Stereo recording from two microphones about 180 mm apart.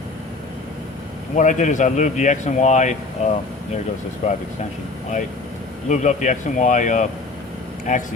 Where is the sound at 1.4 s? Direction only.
45° left (ahead or behind).